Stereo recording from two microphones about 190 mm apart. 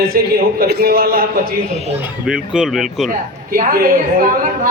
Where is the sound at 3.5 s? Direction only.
50° right (ahead or behind).